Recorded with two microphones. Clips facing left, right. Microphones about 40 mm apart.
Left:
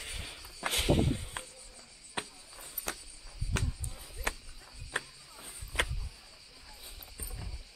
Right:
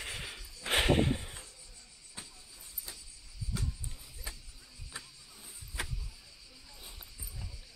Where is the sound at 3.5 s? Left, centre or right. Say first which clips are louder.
Left 4 dB; left.